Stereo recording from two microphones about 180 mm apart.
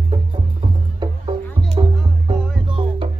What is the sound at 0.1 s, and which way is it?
Music, 30° right (ahead or behind).